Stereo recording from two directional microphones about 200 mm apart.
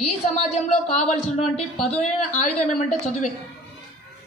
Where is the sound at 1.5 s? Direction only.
5° left (ahead or behind).